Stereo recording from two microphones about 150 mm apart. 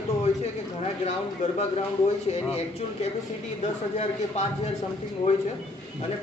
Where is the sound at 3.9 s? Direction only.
45° left (ahead or behind).